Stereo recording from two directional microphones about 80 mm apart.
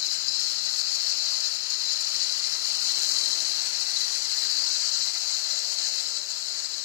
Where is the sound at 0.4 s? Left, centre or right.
Right.